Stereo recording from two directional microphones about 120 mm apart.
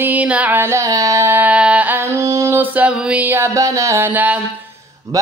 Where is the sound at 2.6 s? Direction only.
15° right (ahead or behind).